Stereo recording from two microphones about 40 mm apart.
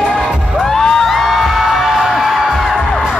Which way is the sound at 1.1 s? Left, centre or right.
Centre.